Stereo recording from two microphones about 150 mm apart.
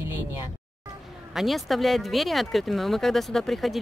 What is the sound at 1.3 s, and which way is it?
Speech, centre (ahead or behind).